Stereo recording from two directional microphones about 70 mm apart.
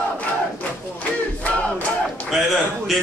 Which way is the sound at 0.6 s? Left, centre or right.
Left.